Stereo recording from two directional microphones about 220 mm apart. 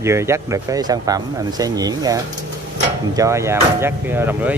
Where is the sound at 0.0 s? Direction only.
10° right (ahead or behind).